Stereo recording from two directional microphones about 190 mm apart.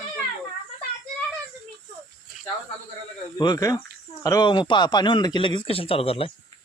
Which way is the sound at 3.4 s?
20° left (ahead or behind).